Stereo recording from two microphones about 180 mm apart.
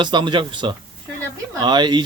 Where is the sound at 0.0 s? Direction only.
25° right (ahead or behind).